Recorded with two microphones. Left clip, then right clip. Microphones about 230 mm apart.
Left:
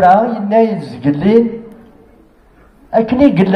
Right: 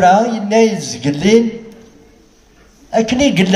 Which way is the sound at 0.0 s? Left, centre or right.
Right.